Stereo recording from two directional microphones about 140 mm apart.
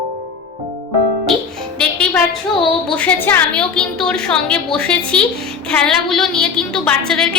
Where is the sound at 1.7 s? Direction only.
10° left (ahead or behind).